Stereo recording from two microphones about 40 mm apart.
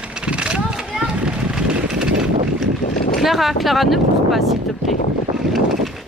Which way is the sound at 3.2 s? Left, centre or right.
Centre.